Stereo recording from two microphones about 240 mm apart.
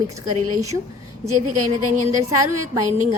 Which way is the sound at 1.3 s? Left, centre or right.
Right.